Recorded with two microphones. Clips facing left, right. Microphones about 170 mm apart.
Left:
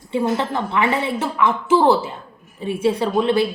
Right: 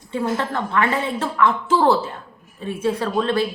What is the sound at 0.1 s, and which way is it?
A woman's voice, 20° left (ahead or behind).